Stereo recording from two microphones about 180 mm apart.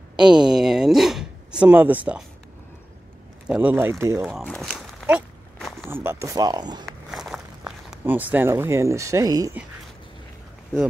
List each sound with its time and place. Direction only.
0.1 s a sound: 5° right (ahead or behind)
3.4 s speech: 10° right (ahead or behind)
4.3 s speech: centre (ahead or behind)
5.0 s walk: centre (ahead or behind)
5.9 s speech: 15° right (ahead or behind)
6.9 s walk: centre (ahead or behind); by 9.6 s 20° right (ahead or behind)